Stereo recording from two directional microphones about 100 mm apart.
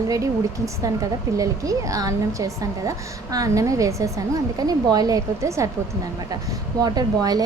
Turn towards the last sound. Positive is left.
turn(degrees=-40)  # may be behind; listen again after turning